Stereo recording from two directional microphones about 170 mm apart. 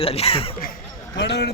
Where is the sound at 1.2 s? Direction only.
85° left.